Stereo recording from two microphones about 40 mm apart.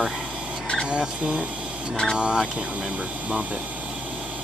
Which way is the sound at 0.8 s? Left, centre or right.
Right.